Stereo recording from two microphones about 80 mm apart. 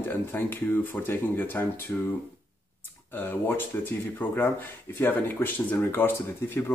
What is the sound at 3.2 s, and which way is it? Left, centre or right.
Speech, left.